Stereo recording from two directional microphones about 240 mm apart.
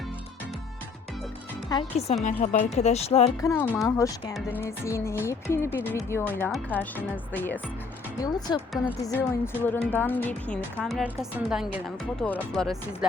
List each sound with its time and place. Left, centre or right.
1.7 s speech: left
3.4 s a woman's voice: centre